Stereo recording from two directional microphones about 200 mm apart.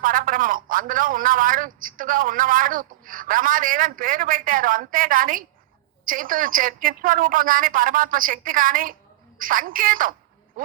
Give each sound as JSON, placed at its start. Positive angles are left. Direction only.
{"t": 0.0, "sound": "a man's voice", "side_deg": -45}